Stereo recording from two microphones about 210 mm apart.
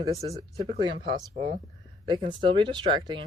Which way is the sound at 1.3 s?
40° right (ahead or behind).